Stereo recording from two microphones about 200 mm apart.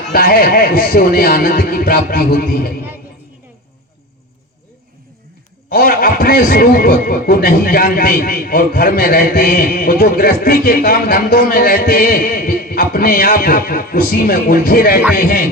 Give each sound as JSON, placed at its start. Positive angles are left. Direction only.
{"t": 0.1, "sound": "a man's voice", "side_deg": 45}
{"t": 5.6, "sound": "a man's voice", "side_deg": 45}